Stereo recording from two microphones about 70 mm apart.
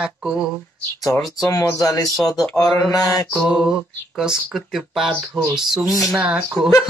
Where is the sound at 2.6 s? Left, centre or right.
Left.